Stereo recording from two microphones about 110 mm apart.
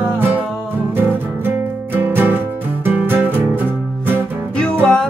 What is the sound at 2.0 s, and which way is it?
Music, 20° right (ahead or behind).